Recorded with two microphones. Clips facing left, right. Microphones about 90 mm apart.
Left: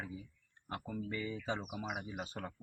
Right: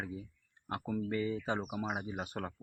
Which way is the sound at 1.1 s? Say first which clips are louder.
Right 4 dB; 35° right (ahead or behind).